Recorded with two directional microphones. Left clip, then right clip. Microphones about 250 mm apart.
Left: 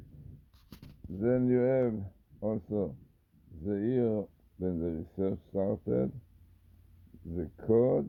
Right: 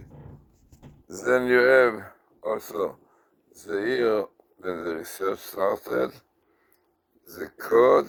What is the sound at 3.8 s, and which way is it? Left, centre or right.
Speech, right.